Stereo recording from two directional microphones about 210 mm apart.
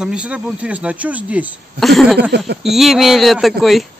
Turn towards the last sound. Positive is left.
turn(degrees=0)  # may be behind; listen again after turning